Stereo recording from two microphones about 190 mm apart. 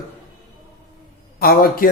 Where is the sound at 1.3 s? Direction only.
55° left (ahead or behind).